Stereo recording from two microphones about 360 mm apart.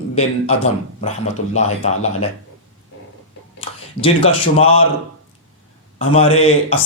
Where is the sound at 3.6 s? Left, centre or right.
Centre.